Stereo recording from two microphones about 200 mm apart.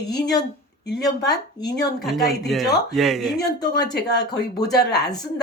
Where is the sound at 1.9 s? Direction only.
Centre (ahead or behind).